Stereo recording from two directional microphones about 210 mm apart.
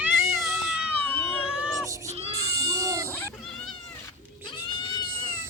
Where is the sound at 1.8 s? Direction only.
15° right (ahead or behind).